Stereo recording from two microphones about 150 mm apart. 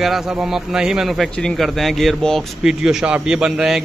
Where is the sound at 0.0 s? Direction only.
Centre (ahead or behind).